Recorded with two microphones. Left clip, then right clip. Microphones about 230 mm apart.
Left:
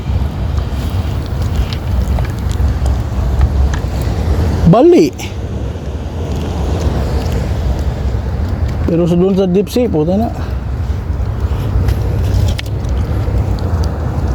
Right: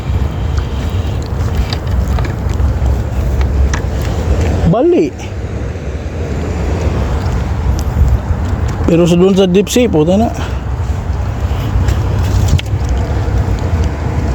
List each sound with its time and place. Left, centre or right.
4.7 s speech: left
8.9 s speech: centre